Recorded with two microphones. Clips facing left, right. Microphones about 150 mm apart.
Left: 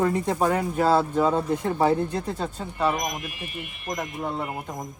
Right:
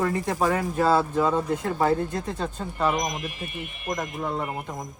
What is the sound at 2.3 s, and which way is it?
Speech, 5° left (ahead or behind).